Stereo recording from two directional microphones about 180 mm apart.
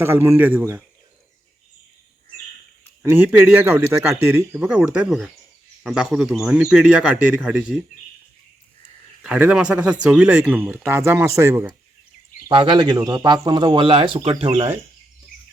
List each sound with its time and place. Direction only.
0.0 s speech: 15° right (ahead or behind)
3.0 s speech: 10° right (ahead or behind)
9.2 s speech: 5° right (ahead or behind)
12.5 s speech: 25° right (ahead or behind)